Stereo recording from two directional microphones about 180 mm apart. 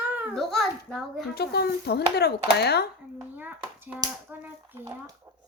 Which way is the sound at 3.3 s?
10° right (ahead or behind).